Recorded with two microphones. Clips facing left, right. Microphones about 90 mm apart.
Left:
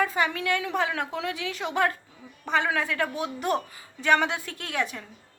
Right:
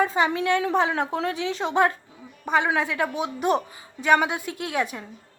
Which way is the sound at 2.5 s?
15° right (ahead or behind).